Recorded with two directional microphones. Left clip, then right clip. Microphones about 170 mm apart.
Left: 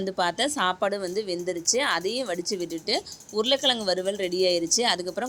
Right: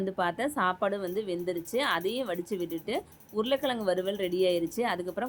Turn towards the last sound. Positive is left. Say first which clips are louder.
# left 6 dB
turn(degrees=15)  # may be behind; listen again after turning